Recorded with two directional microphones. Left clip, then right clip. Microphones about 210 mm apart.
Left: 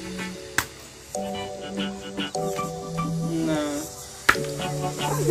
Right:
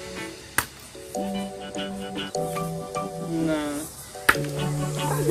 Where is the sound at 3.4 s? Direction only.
Centre (ahead or behind).